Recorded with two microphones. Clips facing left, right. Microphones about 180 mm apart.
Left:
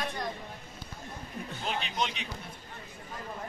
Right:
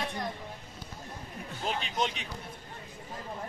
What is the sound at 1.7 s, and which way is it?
Speech, 45° right (ahead or behind).